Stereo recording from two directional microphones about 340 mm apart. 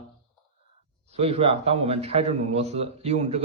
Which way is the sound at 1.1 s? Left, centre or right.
Centre.